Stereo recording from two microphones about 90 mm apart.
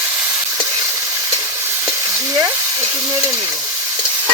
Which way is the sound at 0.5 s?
35° right (ahead or behind).